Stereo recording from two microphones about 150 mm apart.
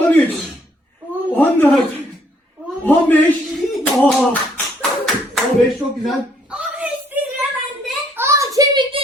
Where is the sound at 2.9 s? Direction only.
10° left (ahead or behind).